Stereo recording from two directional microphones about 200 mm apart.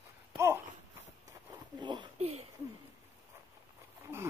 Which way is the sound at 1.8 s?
25° right (ahead or behind).